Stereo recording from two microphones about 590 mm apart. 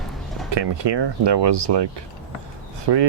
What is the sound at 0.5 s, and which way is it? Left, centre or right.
Speech, right.